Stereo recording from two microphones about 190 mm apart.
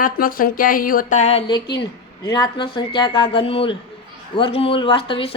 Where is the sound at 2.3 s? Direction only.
25° left (ahead or behind).